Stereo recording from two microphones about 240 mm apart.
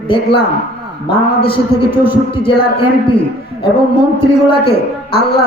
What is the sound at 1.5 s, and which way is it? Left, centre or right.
A man's voice, left.